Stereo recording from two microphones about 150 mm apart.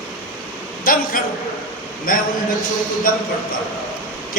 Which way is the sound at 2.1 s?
70° left (ahead or behind).